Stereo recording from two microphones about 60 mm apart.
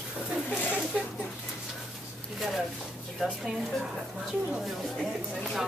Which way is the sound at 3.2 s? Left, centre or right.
Centre.